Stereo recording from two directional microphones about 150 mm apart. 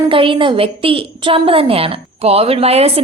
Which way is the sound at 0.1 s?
35° right (ahead or behind).